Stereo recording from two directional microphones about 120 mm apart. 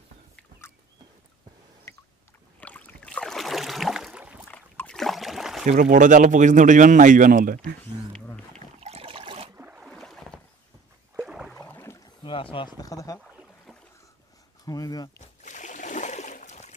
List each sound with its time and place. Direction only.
1.9 s rowboat: 25° left (ahead or behind)
2.6 s boat: 10° left (ahead or behind); by 4.4 s 10° right (ahead or behind)
4.5 s boat: 15° left (ahead or behind)
4.9 s boat: centre (ahead or behind)
5.7 s speech: 90° right
8.5 s boat: 60° right (ahead or behind)
9.6 s boat: 15° right (ahead or behind)
9.8 s boat: 5° left (ahead or behind)
11.1 s a sound: 5° right (ahead or behind)
11.5 s boat: 20° left (ahead or behind)
12.2 s rowboat: 45° left (ahead or behind)
12.7 s speech: 30° left (ahead or behind)
14.7 s speech: 30° left (ahead or behind)
15.4 s a sound: 90° left; by 16.7 s 75° left (ahead or behind)